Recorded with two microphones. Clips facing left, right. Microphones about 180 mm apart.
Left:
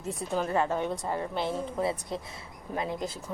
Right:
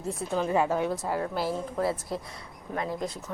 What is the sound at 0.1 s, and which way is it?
Speech, centre (ahead or behind).